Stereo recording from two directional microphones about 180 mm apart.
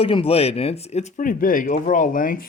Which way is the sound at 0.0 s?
30° left (ahead or behind).